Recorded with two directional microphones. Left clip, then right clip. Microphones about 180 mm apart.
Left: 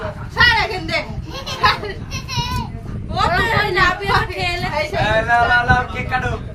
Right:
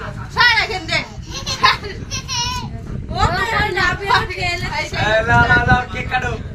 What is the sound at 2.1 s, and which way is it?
Children playing, 5° left (ahead or behind).